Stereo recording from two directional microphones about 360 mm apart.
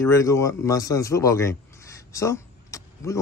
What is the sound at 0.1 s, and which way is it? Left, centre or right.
A man's voice, centre.